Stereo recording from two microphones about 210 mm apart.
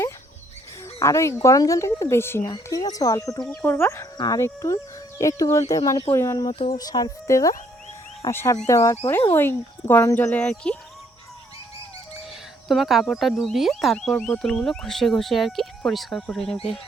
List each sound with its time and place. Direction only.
0.9 s speech: 15° left (ahead or behind)
6.5 s speech: 25° left (ahead or behind); by 10.8 s 5° left (ahead or behind)
12.6 s speech: centre (ahead or behind)